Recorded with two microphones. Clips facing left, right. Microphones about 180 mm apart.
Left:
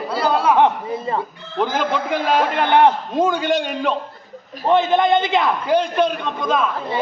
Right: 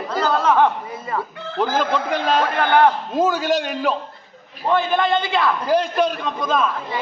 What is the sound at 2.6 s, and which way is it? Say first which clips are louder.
Speech: left 1 dB; 20° left (ahead or behind).